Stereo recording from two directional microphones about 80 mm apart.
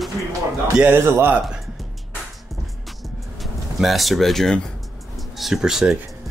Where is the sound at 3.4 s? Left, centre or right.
Centre.